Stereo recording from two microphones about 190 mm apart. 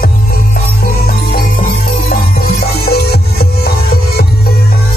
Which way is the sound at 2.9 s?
55° left (ahead or behind).